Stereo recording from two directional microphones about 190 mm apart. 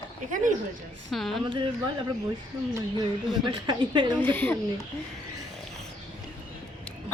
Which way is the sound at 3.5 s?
25° right (ahead or behind).